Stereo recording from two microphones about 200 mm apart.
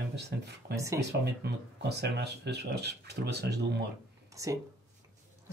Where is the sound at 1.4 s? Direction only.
55° right (ahead or behind).